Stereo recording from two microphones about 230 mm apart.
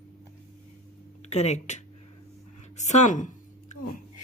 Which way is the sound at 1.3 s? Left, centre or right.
Left.